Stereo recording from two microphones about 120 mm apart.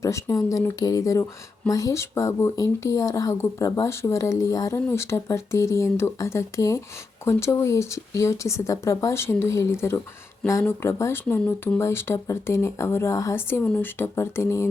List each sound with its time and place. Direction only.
0.0 s speech: 25° left (ahead or behind)